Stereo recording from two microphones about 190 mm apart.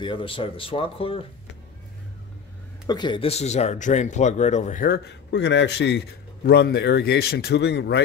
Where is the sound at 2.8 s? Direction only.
25° left (ahead or behind); by 5.0 s 45° left (ahead or behind).